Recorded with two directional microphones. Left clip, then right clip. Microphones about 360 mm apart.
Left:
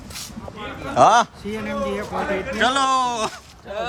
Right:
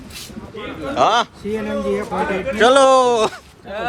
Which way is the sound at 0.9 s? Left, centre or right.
Centre.